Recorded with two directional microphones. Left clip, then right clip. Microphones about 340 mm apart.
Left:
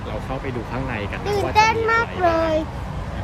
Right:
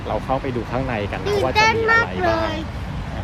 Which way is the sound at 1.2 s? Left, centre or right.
Centre.